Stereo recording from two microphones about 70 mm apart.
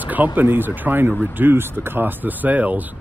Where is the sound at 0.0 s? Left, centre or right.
Right.